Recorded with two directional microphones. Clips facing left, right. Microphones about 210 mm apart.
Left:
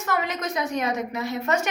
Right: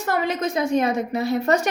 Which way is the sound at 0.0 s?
30° right (ahead or behind).